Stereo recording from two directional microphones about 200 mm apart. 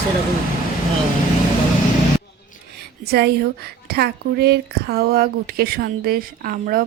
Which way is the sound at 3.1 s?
55° right (ahead or behind).